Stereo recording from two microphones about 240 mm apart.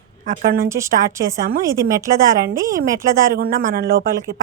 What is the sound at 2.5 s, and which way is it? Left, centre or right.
Speech, right.